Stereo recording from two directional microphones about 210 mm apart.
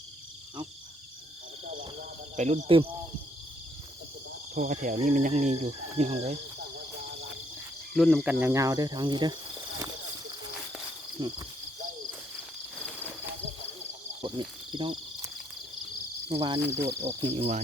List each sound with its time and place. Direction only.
2.3 s speech: 35° right (ahead or behind)
4.5 s speech: 40° right (ahead or behind)
7.9 s speech: centre (ahead or behind); by 9.9 s 20° right (ahead or behind)
11.2 s cricket: 25° right (ahead or behind)
14.3 s cricket: 20° right (ahead or behind)
16.3 s cricket: 25° right (ahead or behind)
16.6 s insect: 10° right (ahead or behind)
17.0 s cricket: 25° right (ahead or behind)